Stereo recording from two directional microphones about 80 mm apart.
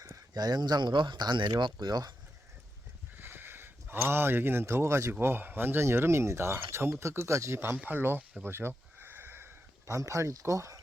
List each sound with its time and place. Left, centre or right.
0.3 s speech: right
3.2 s speech: right
7.6 s speech: right
8.4 s a sound: right